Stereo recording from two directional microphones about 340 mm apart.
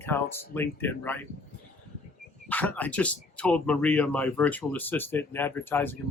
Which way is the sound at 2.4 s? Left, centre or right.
Centre.